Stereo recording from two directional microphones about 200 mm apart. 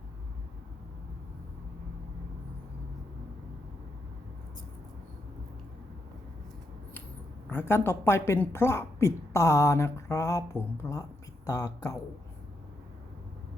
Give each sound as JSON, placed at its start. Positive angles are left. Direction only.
{"t": 7.5, "sound": "speech", "side_deg": 10}